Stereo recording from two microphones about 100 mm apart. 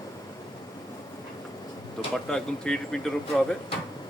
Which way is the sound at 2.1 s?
5° left (ahead or behind).